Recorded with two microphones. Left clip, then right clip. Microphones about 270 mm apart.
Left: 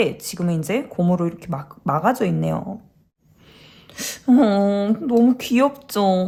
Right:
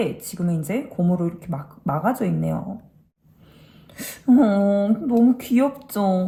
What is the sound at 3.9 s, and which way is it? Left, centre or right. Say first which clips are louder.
A woman's voice: left 1 dB; centre.